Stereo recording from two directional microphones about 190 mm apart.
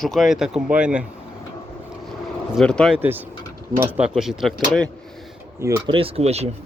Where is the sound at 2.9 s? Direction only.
10° right (ahead or behind).